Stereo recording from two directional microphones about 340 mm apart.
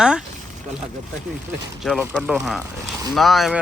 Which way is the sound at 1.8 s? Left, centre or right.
Centre.